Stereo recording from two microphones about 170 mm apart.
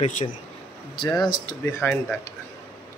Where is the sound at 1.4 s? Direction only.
15° left (ahead or behind).